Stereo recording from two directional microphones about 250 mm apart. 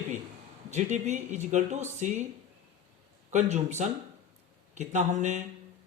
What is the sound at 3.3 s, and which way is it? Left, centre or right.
Speech, right.